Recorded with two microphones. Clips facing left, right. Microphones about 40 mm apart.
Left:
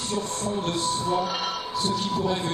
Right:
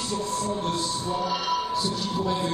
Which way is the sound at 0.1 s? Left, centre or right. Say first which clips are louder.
Even; left.